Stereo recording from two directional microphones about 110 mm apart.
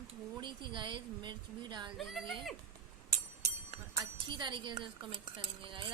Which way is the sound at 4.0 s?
45° right (ahead or behind).